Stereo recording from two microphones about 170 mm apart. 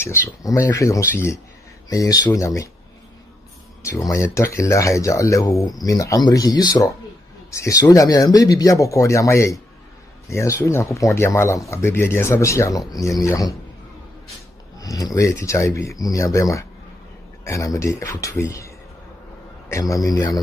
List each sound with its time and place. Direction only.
0.4 s speech: 20° left (ahead or behind)
3.8 s speech: 20° left (ahead or behind)
14.8 s speech: 20° left (ahead or behind)
19.7 s speech: 20° left (ahead or behind)